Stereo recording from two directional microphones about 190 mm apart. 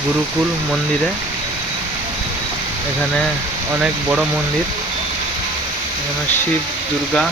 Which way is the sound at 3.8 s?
5° right (ahead or behind).